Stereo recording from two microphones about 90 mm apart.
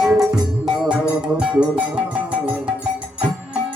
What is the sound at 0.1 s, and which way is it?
Music, 10° right (ahead or behind).